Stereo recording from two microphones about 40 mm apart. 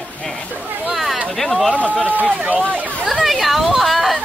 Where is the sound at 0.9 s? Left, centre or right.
Centre.